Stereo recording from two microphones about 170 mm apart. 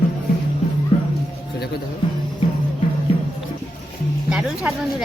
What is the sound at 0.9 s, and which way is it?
Music, 30° left (ahead or behind).